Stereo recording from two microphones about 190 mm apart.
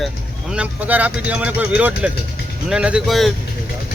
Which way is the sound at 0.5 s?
5° right (ahead or behind).